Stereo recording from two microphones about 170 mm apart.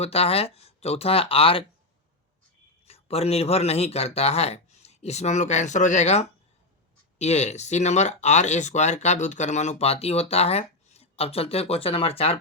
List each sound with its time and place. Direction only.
0.0 s speech: 35° left (ahead or behind)
2.8 s speech: 35° left (ahead or behind)